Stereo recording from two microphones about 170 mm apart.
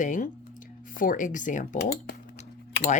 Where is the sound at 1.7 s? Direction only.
75° left (ahead or behind).